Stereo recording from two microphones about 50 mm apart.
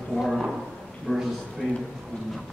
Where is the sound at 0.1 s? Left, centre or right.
Centre.